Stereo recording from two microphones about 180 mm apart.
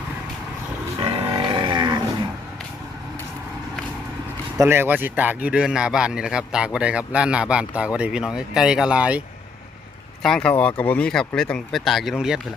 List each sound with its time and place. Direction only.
0.9 s livestock: 25° right (ahead or behind)
4.6 s speech: 15° right (ahead or behind)
10.2 s speech: 5° left (ahead or behind)